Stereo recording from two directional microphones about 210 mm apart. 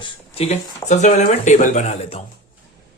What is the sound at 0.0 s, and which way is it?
Speech, 30° left (ahead or behind).